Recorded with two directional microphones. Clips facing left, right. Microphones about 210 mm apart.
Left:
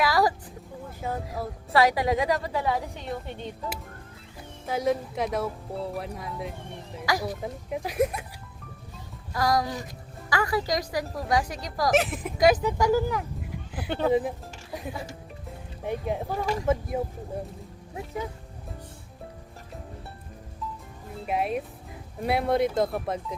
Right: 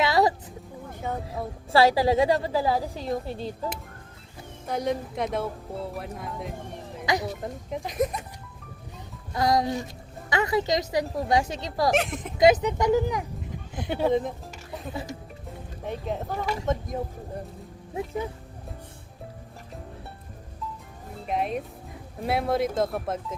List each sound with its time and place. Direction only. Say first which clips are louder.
0.0 s a sound: right 1 dB; 25° right (ahead or behind)
1.0 s speech: even; 5° left (ahead or behind)
1.7 s a woman's voice: right 3 dB; 30° right (ahead or behind)
4.6 s speech: left 2 dB; centre (ahead or behind)
7.0 s a woman's voice: right 1 dB; 20° right (ahead or behind)
7.4 s speech: left 1 dB; 5° left (ahead or behind)
9.3 s a woman's voice: right 2 dB; 25° right (ahead or behind)
11.9 s speech: left 2 dB; 5° left (ahead or behind)
12.4 s a woman's voice: right 2 dB; 20° right (ahead or behind)
14.1 s speech: left 2 dB; 5° left (ahead or behind)
15.8 s speech: left 2 dB; 10° left (ahead or behind)
21.2 s speech: even; 5° left (ahead or behind)